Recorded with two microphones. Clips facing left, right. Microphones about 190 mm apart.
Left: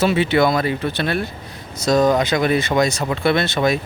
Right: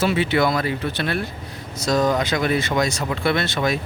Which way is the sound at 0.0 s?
25° left (ahead or behind).